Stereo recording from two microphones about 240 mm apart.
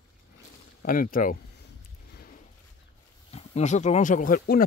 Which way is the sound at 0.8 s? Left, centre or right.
Left.